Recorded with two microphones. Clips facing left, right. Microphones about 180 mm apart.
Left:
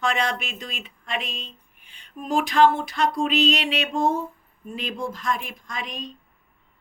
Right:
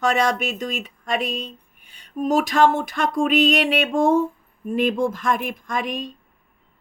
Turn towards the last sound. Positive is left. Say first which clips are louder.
# right 8 dB
turn(degrees=-50)  # may be behind; listen again after turning